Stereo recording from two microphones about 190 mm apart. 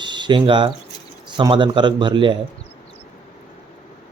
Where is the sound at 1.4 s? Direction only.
25° right (ahead or behind).